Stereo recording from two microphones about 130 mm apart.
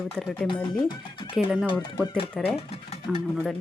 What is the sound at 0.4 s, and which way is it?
Speech, 35° left (ahead or behind).